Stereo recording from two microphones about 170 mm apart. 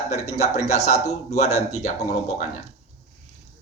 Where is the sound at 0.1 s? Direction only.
40° left (ahead or behind).